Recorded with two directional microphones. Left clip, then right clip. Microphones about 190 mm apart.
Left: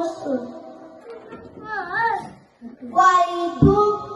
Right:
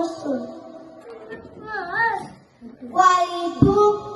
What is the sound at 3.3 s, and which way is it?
Music, 15° right (ahead or behind).